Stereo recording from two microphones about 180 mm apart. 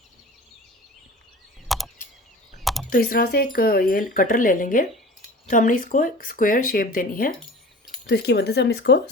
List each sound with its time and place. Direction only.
1.6 s chop: centre (ahead or behind)
2.9 s speech: 55° left (ahead or behind)
8.0 s speech: 65° left (ahead or behind)